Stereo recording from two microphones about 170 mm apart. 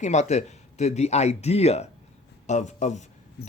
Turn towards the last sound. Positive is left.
turn(degrees=45)  # may be behind; listen again after turning